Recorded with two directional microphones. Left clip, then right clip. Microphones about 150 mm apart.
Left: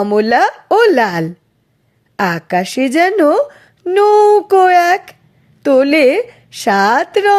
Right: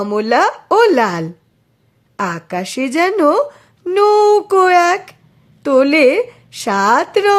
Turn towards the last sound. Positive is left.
turn(degrees=20)  # may be behind; listen again after turning